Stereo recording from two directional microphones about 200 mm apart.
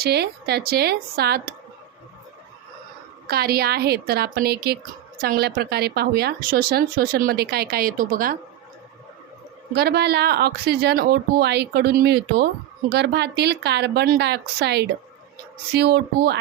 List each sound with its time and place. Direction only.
0.0 s a woman's voice: 55° right (ahead or behind)
3.2 s a woman's voice: 50° right (ahead or behind)
9.7 s a woman's voice: 55° right (ahead or behind)